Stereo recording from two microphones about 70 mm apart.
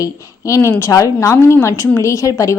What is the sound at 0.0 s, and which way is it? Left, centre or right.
A woman's voice, left.